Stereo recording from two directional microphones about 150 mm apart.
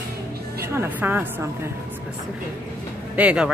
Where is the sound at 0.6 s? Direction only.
15° right (ahead or behind).